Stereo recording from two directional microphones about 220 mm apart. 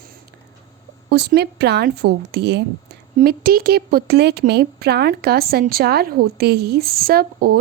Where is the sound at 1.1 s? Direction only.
50° right (ahead or behind).